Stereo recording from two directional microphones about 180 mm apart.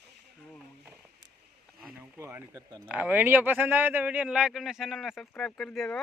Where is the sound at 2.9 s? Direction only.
10° right (ahead or behind).